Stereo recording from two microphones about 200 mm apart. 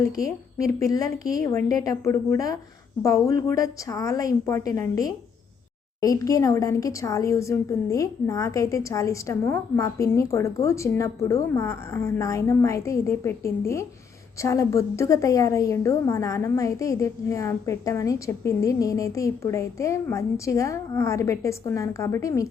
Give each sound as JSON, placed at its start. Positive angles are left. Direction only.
{"t": 0.0, "sound": "a woman's voice", "side_deg": 15}